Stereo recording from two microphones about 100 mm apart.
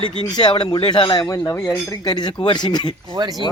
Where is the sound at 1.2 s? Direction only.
35° left (ahead or behind).